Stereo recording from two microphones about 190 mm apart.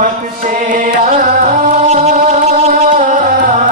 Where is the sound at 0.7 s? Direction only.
45° right (ahead or behind).